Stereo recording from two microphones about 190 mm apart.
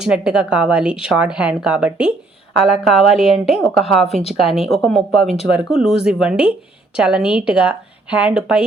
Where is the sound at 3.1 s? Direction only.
30° left (ahead or behind).